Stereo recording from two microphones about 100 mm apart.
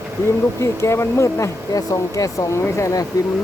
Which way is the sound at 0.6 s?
30° left (ahead or behind).